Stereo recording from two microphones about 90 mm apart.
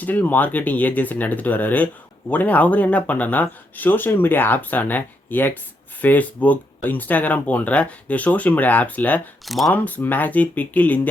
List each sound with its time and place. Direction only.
0.0 s speech: 20° left (ahead or behind)
9.5 s speech: centre (ahead or behind)
9.7 s speech: 20° left (ahead or behind)